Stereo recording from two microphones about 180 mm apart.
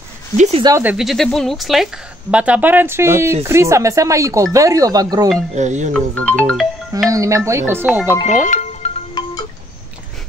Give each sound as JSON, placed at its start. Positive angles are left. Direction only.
{"t": 0.4, "sound": "speech", "side_deg": -35}
{"t": 0.7, "sound": "speech", "side_deg": -15}
{"t": 0.9, "sound": "speech", "side_deg": 0}
{"t": 5.5, "sound": "speech", "side_deg": -40}
{"t": 5.9, "sound": "speech", "side_deg": 5}
{"t": 7.1, "sound": "speech", "side_deg": -15}
{"t": 8.5, "sound": "music", "side_deg": 40}
{"t": 9.2, "sound": "wind chime", "side_deg": 25}